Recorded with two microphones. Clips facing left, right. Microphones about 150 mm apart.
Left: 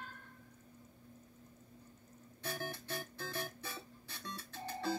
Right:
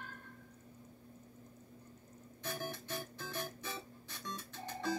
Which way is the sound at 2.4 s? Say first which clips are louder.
Even; 15° right (ahead or behind).